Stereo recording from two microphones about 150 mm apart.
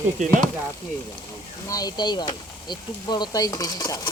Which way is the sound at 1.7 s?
25° left (ahead or behind).